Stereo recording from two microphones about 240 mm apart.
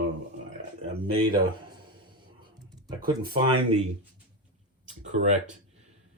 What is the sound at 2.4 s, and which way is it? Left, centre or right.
Computer keyboard, centre.